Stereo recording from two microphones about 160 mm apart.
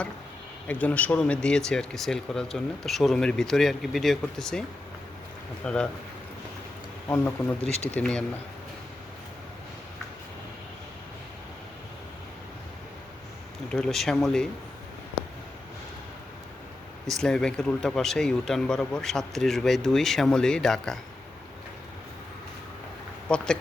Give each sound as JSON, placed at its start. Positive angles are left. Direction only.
{"t": 0.7, "sound": "speech", "side_deg": 10}
{"t": 5.6, "sound": "speech", "side_deg": 5}
{"t": 7.6, "sound": "speech", "side_deg": 40}
{"t": 7.9, "sound": "speech", "side_deg": 5}
{"t": 13.7, "sound": "speech", "side_deg": 5}
{"t": 17.1, "sound": "speech", "side_deg": 5}
{"t": 23.3, "sound": "speech", "side_deg": 5}